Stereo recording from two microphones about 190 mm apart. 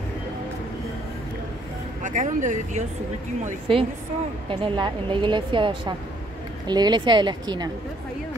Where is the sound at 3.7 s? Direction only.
30° right (ahead or behind).